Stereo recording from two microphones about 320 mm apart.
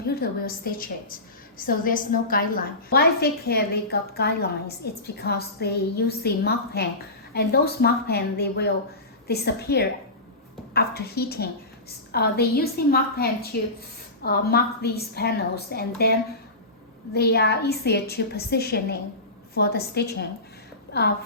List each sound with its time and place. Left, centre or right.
0.2 s a woman's voice: left
17.2 s a woman's voice: left